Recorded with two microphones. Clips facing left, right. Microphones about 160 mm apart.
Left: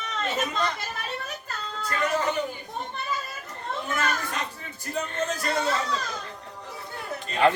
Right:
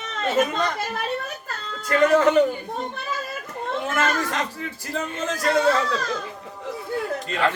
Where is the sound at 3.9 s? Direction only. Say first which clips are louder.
Right 5 dB; 90° right.